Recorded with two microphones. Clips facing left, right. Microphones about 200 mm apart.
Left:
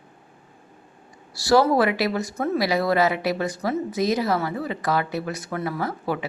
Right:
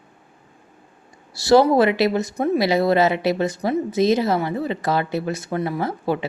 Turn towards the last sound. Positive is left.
turn(degrees=-25)  # may be behind; listen again after turning